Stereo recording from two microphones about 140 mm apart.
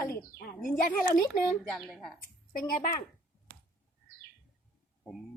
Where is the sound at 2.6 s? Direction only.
85° left.